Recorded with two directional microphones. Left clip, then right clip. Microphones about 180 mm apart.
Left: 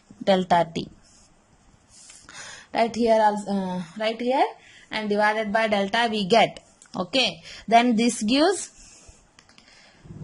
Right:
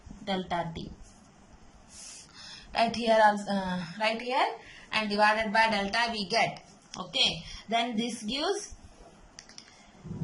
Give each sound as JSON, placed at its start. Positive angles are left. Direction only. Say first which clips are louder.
{"t": 0.3, "sound": "speech", "louder": "left 12 dB", "side_deg": 60}
{"t": 2.3, "sound": "a woman's voice", "louder": "left 5 dB", "side_deg": 45}